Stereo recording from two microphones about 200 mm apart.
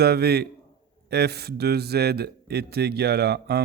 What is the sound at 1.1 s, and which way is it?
Speech, 55° right (ahead or behind).